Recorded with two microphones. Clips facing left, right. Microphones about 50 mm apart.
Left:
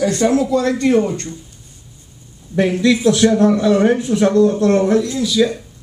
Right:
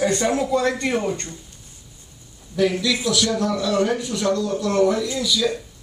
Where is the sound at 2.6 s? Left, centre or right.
Left.